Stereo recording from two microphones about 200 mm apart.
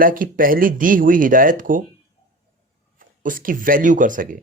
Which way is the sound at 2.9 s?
45° right (ahead or behind).